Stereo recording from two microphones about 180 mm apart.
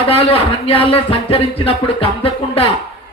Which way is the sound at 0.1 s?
35° left (ahead or behind).